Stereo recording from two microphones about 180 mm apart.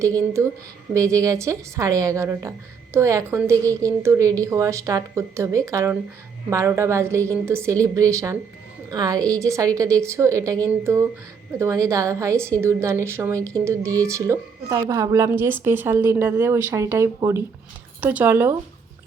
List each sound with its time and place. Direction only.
0.4 s a woman's voice: 15° right (ahead or behind)